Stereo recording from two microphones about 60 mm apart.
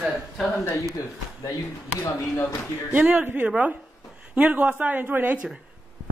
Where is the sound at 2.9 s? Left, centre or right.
Right.